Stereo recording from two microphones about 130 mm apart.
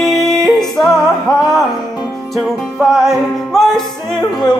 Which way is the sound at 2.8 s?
Centre (ahead or behind).